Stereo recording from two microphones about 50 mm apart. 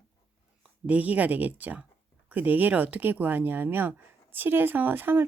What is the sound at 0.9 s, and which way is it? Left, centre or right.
Speech, right.